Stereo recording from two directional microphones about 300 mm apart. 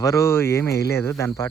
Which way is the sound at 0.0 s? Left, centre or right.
Centre.